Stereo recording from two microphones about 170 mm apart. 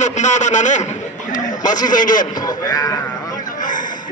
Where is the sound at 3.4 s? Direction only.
50° left (ahead or behind).